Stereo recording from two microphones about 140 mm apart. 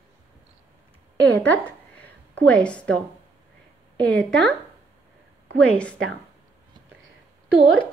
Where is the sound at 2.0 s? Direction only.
10° left (ahead or behind).